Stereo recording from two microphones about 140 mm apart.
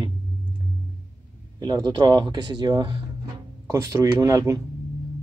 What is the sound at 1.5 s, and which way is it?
Speech, 30° right (ahead or behind).